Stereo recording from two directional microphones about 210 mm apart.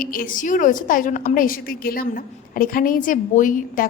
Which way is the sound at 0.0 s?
45° left (ahead or behind).